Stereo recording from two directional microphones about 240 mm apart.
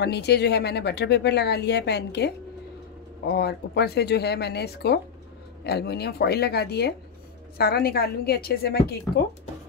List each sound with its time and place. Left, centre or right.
0.0 s a woman's voice: left